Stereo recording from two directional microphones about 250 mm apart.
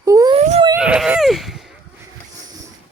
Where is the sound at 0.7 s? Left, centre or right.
Centre.